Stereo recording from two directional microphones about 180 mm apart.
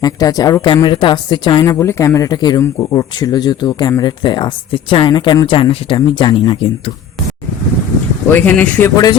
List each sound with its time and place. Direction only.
0.0 s a woman's voice: 20° left (ahead or behind)
8.3 s speech: 10° left (ahead or behind)